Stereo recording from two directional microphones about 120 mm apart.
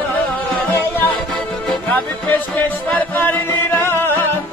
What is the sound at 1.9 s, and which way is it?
Music, 15° left (ahead or behind).